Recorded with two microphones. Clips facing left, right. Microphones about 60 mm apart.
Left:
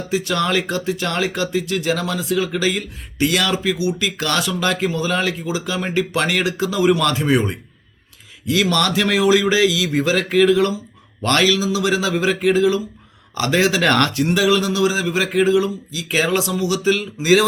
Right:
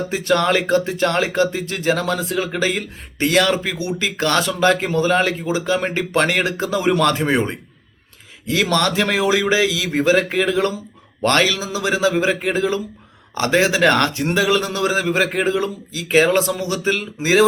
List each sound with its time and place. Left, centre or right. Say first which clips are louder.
0.1 s speech: right 1 dB; right